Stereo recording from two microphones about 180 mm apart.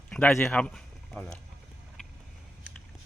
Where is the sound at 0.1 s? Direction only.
5° left (ahead or behind).